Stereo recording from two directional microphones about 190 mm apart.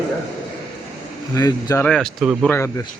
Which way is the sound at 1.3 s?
15° left (ahead or behind).